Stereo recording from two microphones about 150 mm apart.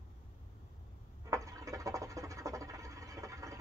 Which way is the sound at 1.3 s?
20° right (ahead or behind).